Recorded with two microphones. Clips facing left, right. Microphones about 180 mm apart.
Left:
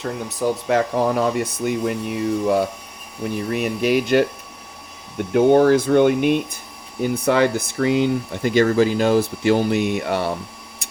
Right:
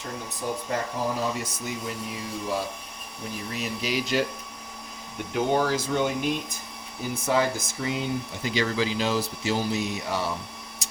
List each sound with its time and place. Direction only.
0.0 s speech: 80° left; by 4.3 s 60° left (ahead or behind)
5.3 s speech: 55° left (ahead or behind)